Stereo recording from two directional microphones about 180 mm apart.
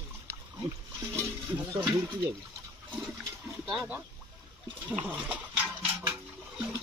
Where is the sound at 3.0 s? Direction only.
Centre (ahead or behind).